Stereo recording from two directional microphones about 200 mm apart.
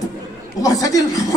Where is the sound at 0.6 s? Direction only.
15° left (ahead or behind).